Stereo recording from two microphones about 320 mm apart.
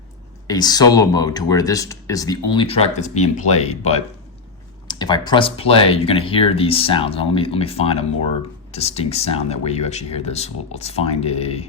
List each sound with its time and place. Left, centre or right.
0.4 s speech: centre